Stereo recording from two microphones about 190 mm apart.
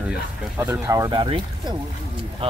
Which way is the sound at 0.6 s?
15° right (ahead or behind).